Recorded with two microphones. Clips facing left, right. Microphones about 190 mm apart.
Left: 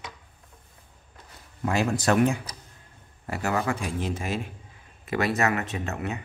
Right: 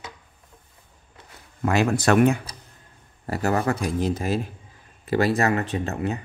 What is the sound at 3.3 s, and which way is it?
Speech, 40° right (ahead or behind).